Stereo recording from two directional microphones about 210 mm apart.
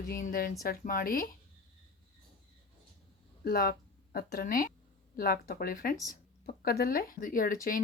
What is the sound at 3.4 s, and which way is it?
Speech, 45° left (ahead or behind).